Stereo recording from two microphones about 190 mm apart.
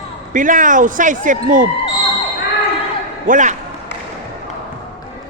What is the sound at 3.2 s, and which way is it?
Speech, 40° right (ahead or behind).